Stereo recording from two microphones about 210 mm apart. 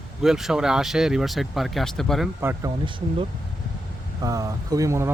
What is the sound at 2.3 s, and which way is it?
Speech, 15° right (ahead or behind).